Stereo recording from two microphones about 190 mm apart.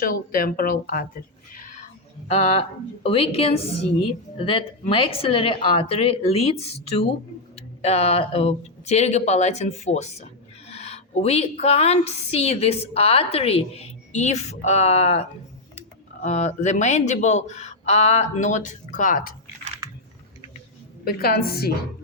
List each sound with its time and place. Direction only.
0.0 s speech: 45° left (ahead or behind)
2.2 s a woman's voice: 35° left (ahead or behind)
16.2 s a woman's voice: 35° left (ahead or behind)
21.0 s speech: 55° left (ahead or behind)